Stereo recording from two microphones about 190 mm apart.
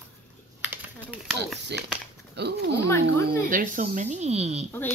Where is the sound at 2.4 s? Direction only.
65° right (ahead or behind).